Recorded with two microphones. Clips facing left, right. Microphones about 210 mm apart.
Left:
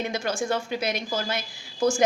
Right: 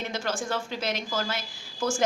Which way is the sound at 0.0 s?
15° left (ahead or behind).